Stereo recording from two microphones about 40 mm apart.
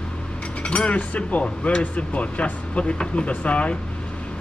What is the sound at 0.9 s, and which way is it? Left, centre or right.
Speech, left.